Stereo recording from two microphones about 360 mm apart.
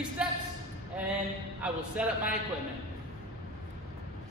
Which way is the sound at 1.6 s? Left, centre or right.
Centre.